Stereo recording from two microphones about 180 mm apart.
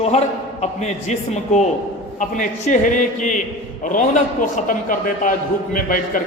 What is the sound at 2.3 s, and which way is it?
A man's voice, 45° left (ahead or behind).